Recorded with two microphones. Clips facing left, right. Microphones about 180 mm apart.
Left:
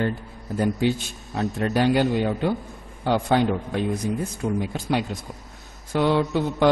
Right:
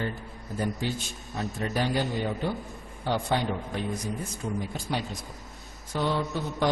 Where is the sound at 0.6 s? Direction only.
70° left (ahead or behind).